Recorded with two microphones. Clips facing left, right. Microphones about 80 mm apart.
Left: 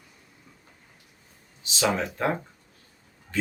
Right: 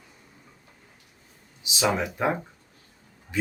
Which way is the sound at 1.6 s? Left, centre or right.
Centre.